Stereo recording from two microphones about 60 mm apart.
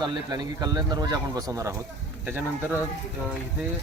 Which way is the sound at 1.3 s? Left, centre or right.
Right.